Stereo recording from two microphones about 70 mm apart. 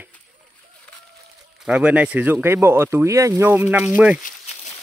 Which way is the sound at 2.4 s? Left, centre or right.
Right.